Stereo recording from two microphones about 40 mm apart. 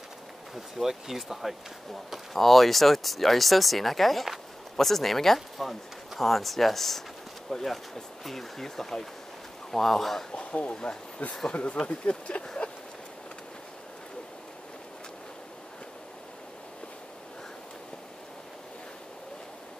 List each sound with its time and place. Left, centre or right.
0.6 s speech: centre
2.3 s speech: centre
10.3 s speech: left